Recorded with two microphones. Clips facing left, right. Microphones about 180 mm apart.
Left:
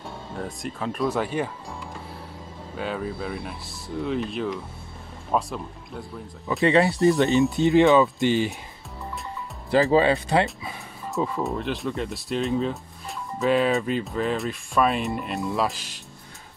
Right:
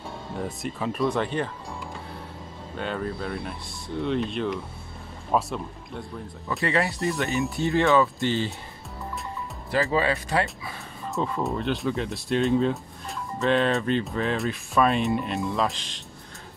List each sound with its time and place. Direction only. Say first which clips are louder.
0.3 s speech: right 1 dB; centre (ahead or behind)
6.6 s speech: left 7 dB; 20° left (ahead or behind)
9.8 s speech: left 5 dB; 25° left (ahead or behind)
11.1 s speech: left 1 dB; centre (ahead or behind)